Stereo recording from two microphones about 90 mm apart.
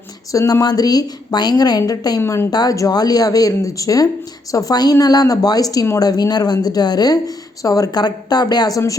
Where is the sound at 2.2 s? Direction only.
25° left (ahead or behind).